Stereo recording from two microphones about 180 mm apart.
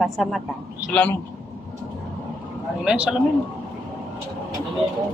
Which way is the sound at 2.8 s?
5° right (ahead or behind).